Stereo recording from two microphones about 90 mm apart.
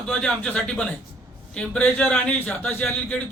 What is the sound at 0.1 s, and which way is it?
A man's voice, 10° left (ahead or behind).